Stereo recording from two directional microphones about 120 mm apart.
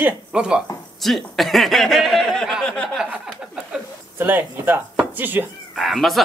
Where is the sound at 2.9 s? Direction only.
10° right (ahead or behind).